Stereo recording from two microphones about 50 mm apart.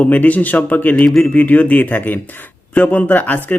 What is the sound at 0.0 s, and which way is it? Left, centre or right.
Speech, left.